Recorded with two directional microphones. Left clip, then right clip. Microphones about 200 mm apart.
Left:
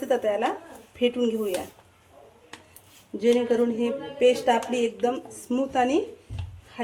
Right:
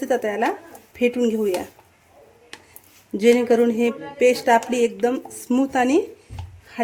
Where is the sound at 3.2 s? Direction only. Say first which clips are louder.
Right 6 dB; 55° right (ahead or behind).